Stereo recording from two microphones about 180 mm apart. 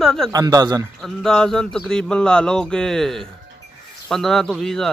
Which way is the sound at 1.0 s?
5° left (ahead or behind).